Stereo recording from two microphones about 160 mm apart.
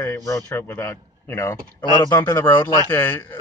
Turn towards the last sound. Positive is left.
turn(degrees=15)  # may be behind; listen again after turning